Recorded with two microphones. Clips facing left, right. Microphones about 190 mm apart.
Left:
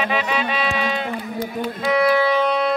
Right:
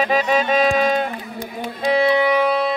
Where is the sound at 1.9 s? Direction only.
25° right (ahead or behind); by 2.7 s 5° right (ahead or behind).